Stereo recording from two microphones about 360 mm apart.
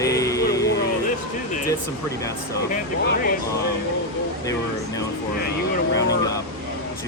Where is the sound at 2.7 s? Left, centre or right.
Left.